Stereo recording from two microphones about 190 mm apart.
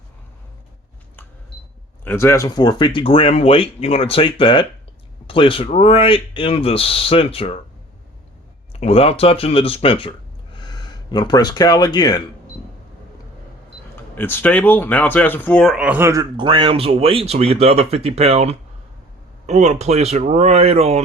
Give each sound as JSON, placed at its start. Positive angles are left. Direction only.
{"t": 2.0, "sound": "speech", "side_deg": 15}
{"t": 8.7, "sound": "speech", "side_deg": 30}
{"t": 13.9, "sound": "speech", "side_deg": 10}
{"t": 16.4, "sound": "speech", "side_deg": -25}